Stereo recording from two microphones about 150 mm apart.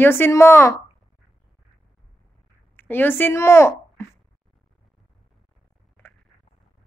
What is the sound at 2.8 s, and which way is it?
Speech, 15° left (ahead or behind).